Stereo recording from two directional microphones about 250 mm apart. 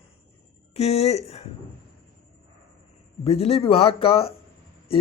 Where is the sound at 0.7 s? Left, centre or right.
Left.